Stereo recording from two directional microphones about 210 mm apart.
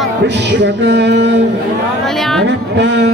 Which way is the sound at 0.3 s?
55° right (ahead or behind).